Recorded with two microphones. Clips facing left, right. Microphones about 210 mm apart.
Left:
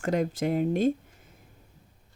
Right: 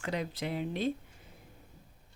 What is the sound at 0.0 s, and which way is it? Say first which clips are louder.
Speech: left 9 dB; 45° left (ahead or behind).